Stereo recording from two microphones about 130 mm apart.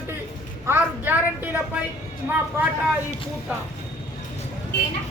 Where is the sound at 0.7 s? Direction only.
15° right (ahead or behind).